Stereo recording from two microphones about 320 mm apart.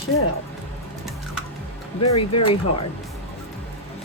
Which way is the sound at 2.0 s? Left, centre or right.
Left.